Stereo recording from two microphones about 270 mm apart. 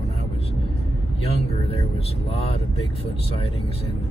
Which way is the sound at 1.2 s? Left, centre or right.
Left.